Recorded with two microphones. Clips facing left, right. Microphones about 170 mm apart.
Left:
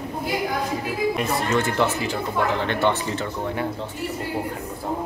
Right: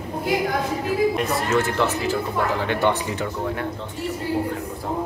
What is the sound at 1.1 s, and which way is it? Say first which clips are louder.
Speech: right 1 dB; centre (ahead or behind).